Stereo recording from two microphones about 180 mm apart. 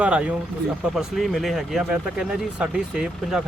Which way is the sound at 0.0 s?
5° right (ahead or behind).